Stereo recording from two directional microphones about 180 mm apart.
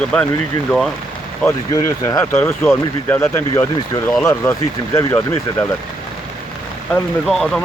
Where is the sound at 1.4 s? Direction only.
15° left (ahead or behind).